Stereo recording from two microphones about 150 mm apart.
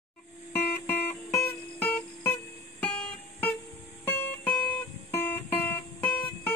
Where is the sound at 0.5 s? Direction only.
10° left (ahead or behind).